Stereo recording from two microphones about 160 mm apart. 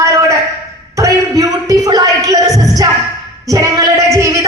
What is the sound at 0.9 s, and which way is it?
Music, 20° right (ahead or behind).